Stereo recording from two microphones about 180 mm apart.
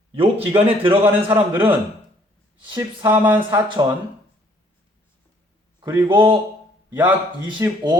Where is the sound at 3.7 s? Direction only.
25° right (ahead or behind).